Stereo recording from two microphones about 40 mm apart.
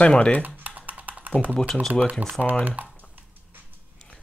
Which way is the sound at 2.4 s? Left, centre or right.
Centre.